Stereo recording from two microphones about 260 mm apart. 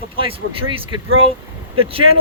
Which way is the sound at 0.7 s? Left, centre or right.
Right.